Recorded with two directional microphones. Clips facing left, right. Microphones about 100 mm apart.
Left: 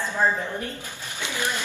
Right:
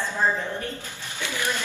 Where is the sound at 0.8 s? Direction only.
15° left (ahead or behind).